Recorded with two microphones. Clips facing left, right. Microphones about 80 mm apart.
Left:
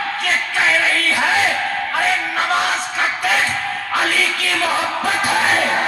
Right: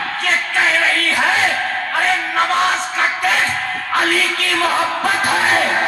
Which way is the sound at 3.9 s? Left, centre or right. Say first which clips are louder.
Right 2 dB; right.